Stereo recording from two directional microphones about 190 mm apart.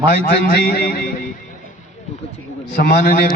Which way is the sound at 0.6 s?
50° left (ahead or behind).